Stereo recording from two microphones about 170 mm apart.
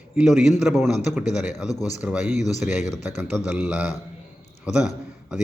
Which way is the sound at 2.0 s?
5° right (ahead or behind).